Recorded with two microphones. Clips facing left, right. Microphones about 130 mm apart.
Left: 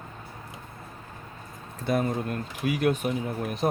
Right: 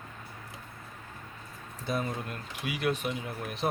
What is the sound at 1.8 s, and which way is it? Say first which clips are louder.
Speech: left 7 dB; 50° left (ahead or behind).